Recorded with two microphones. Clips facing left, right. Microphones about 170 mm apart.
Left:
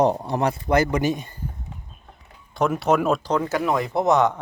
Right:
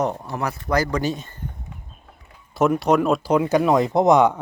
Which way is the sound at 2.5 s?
Centre (ahead or behind).